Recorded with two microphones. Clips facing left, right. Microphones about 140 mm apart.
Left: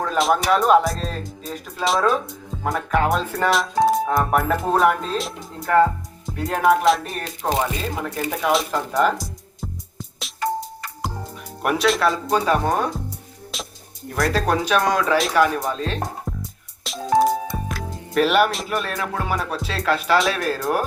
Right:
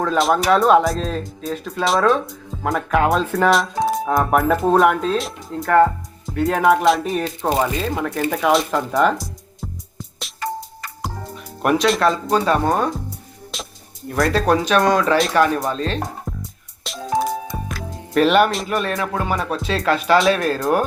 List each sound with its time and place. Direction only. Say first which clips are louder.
0.0 s speech: right 2 dB; centre (ahead or behind)
10.2 s music: left 3 dB; centre (ahead or behind)
11.6 s speech: right 3 dB; 5° left (ahead or behind)
13.5 s music: even; centre (ahead or behind)
14.2 s speech: right 3 dB; centre (ahead or behind)
16.9 s music: even; centre (ahead or behind)
17.7 s speech: even; centre (ahead or behind)